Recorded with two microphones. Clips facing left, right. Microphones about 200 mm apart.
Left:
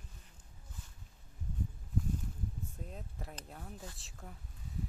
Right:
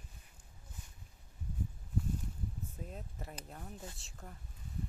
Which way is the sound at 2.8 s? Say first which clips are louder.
Right 1 dB; centre (ahead or behind).